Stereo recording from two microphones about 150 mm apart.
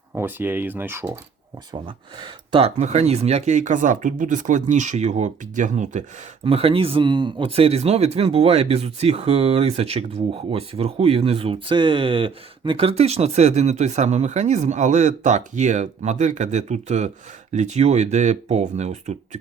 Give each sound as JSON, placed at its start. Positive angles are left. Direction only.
{"t": 0.1, "sound": "speech", "side_deg": -15}
{"t": 2.2, "sound": "speech", "side_deg": -35}
{"t": 6.4, "sound": "speech", "side_deg": -40}